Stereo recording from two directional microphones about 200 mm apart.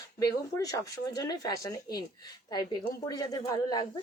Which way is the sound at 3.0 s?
20° left (ahead or behind).